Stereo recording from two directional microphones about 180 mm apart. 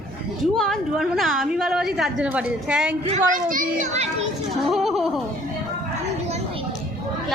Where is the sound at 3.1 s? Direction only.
45° right (ahead or behind).